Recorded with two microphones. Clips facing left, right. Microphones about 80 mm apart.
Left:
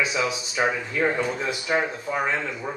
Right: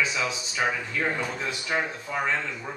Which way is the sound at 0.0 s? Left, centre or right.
Centre.